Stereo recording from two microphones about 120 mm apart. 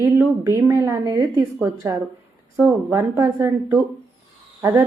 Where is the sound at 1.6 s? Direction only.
20° right (ahead or behind).